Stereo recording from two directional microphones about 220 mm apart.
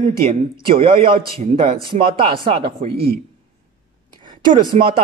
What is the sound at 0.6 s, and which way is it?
A man's voice, 25° right (ahead or behind).